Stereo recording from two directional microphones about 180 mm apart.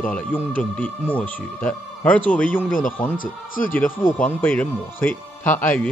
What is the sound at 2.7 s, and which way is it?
Speech, 50° left (ahead or behind).